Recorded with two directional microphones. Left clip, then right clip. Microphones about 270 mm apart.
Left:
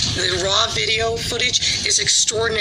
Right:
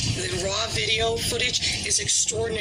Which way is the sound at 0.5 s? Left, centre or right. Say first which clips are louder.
Left 5 dB; centre.